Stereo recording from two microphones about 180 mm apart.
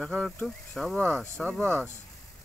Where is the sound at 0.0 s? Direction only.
5° left (ahead or behind).